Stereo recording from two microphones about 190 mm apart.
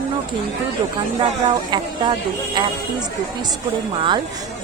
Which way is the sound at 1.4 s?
25° right (ahead or behind).